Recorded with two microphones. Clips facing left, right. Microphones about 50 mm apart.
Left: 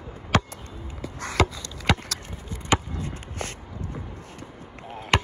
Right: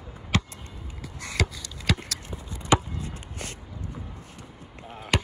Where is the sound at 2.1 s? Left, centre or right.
Left.